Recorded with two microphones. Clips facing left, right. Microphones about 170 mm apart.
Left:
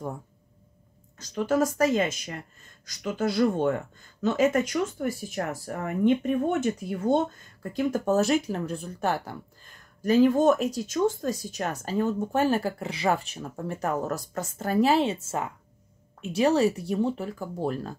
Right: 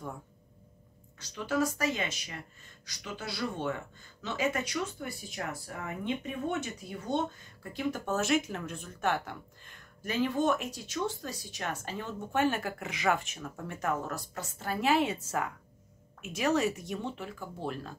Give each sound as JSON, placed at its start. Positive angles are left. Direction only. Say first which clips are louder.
{"t": 1.1, "sound": "speech", "louder": "left 7 dB", "side_deg": 45}